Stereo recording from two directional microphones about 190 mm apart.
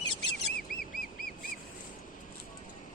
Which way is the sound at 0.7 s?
50° left (ahead or behind).